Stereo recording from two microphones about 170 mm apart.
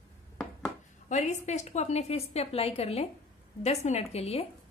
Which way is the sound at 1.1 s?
45° left (ahead or behind).